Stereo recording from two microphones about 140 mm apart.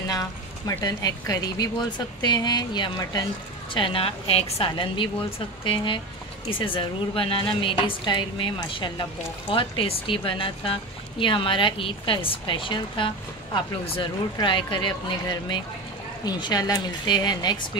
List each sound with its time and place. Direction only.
0.1 s speech: 25° left (ahead or behind)
3.7 s speech: 40° left (ahead or behind)
6.5 s speech: 40° left (ahead or behind)